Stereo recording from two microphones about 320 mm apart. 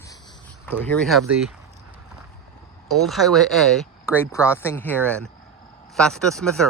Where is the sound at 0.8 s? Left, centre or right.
Centre.